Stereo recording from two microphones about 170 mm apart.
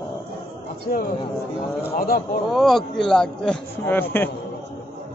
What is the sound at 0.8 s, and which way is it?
Speech, 65° left (ahead or behind).